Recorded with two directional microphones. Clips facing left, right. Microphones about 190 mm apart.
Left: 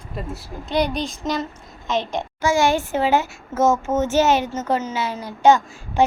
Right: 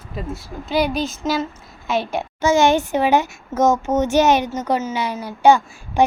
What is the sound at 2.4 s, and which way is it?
Speech, 20° right (ahead or behind).